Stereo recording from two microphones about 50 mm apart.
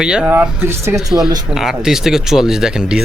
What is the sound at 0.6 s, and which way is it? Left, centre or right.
Speech, right.